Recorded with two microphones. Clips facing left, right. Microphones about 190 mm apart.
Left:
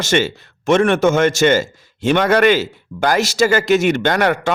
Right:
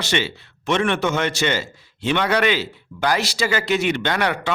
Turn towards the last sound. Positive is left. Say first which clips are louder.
# left 6 dB
turn(degrees=45)  # may be behind; listen again after turning